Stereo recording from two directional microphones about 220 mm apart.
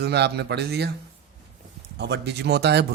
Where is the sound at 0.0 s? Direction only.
50° right (ahead or behind).